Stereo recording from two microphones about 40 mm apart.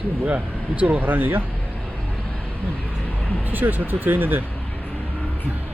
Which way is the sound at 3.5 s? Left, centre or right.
Right.